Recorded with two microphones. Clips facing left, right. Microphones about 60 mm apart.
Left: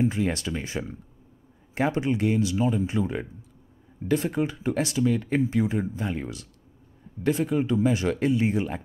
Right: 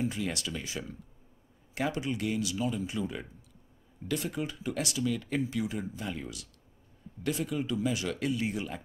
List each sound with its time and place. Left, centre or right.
0.0 s speech: left